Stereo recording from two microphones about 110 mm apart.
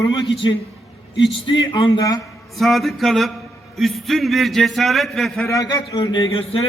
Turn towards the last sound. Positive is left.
turn(degrees=55)  # may be behind; listen again after turning